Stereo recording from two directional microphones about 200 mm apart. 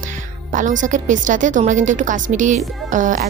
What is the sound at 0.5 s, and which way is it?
A woman's voice, 40° right (ahead or behind).